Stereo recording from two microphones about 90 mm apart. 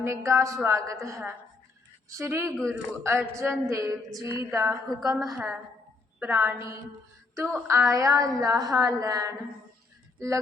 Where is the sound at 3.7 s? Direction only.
35° right (ahead or behind).